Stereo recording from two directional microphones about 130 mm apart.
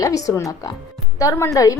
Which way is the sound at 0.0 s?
25° left (ahead or behind).